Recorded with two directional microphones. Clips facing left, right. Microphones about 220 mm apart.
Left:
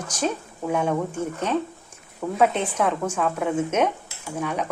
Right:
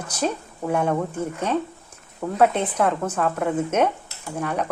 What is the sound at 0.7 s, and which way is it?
Speech, 10° left (ahead or behind).